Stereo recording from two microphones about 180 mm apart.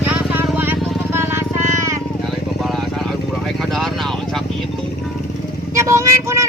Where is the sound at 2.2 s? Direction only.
Centre (ahead or behind).